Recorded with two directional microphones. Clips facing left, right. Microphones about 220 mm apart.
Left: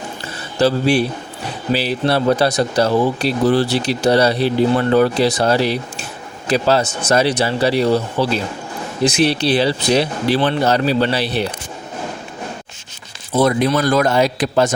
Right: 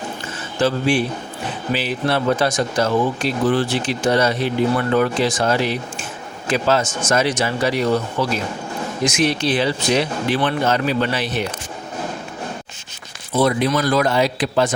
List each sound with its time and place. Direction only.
0.6 s speech: 40° left (ahead or behind)
13.4 s a man's voice: 45° left (ahead or behind)